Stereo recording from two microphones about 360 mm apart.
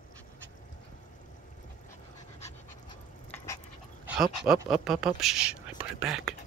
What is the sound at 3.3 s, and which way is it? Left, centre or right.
Dog, centre.